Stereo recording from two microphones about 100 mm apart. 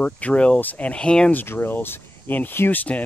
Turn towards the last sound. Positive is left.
turn(degrees=15)  # may be behind; listen again after turning